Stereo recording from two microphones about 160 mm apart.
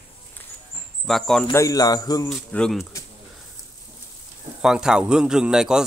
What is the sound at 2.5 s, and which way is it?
Speech, 5° left (ahead or behind).